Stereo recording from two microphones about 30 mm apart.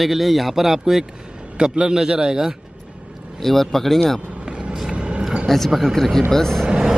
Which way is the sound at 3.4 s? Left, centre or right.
Centre.